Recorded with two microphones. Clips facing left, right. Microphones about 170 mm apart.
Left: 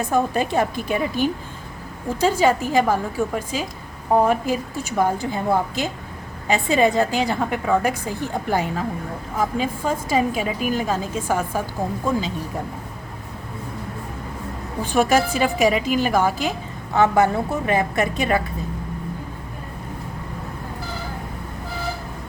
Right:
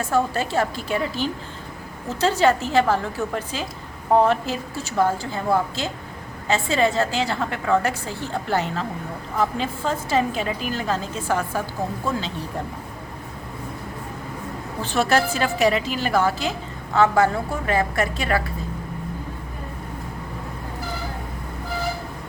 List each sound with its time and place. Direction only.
0.0 s a woman's voice: 15° left (ahead or behind)
2.0 s a woman's voice: 10° left (ahead or behind)
14.8 s a woman's voice: 15° left (ahead or behind)